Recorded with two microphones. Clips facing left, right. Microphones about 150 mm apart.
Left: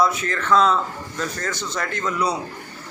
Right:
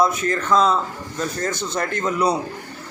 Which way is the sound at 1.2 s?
25° right (ahead or behind).